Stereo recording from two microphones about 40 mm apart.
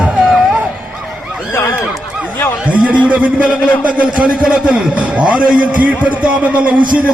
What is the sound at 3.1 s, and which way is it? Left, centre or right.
A man's voice, right.